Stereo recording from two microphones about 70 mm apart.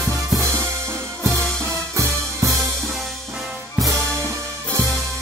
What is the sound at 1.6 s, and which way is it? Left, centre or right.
Music, right.